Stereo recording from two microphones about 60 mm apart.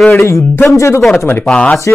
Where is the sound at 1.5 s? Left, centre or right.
Centre.